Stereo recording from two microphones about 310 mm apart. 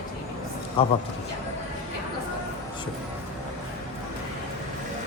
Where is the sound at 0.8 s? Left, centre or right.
Centre.